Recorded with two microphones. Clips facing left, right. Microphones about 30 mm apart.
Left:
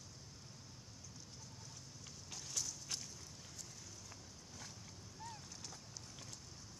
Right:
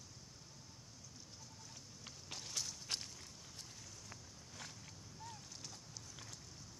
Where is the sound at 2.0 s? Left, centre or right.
Right.